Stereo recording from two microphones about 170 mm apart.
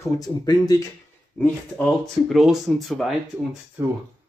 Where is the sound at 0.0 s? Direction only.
20° left (ahead or behind).